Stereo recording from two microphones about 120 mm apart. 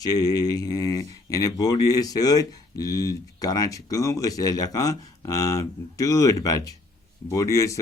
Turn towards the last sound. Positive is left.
turn(degrees=25)  # may be behind; listen again after turning